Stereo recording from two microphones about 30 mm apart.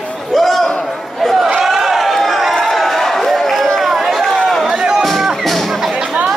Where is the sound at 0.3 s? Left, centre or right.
Centre.